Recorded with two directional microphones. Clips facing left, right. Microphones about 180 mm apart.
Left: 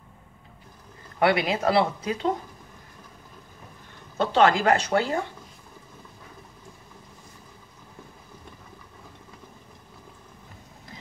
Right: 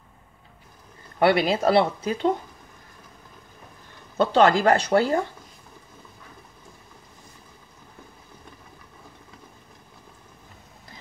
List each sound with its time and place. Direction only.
1.2 s speech: 30° right (ahead or behind)
4.2 s speech: 35° right (ahead or behind)